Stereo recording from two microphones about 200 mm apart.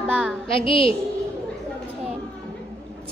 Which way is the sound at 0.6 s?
25° left (ahead or behind).